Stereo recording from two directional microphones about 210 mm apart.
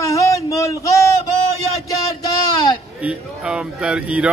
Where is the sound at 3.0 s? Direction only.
5° right (ahead or behind).